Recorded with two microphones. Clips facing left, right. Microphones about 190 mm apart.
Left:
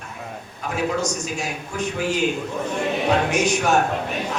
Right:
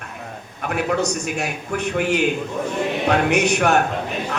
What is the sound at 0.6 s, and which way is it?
A man's voice, 65° right (ahead or behind).